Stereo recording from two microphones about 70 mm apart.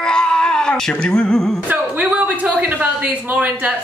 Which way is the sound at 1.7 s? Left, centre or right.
Right.